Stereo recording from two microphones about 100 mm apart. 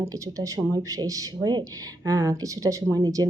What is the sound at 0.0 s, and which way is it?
Speech, 35° right (ahead or behind).